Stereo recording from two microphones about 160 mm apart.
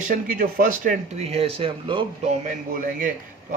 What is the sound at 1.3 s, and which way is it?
Speech, 40° right (ahead or behind).